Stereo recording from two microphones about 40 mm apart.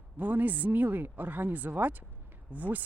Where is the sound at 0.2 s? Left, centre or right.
Right.